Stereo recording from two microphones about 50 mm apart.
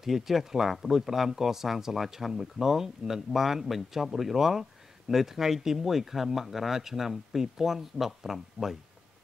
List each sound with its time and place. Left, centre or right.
0.0 s speech: centre